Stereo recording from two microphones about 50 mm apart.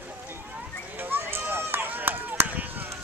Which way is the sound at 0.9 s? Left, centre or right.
Right.